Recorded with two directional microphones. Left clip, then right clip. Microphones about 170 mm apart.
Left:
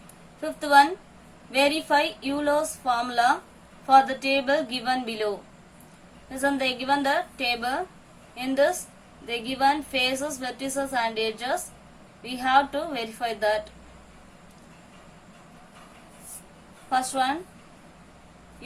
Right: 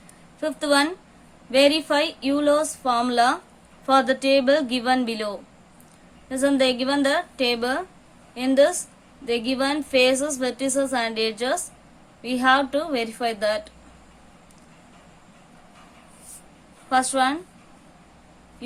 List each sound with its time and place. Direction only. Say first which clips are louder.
0.4 s a woman's voice: left 2 dB; 60° right (ahead or behind)
6.3 s a woman's voice: right 5 dB; 55° right (ahead or behind)
16.9 s a woman's voice: right 4 dB; 65° right (ahead or behind)